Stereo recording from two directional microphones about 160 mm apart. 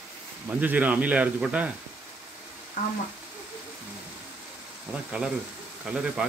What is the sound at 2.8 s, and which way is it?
Speech, 55° left (ahead or behind).